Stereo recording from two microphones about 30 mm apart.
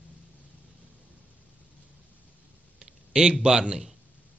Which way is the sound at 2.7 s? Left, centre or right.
Right.